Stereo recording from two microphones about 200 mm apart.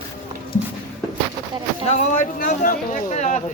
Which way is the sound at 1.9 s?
40° left (ahead or behind).